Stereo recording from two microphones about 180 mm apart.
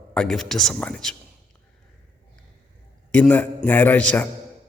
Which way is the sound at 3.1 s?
10° left (ahead or behind).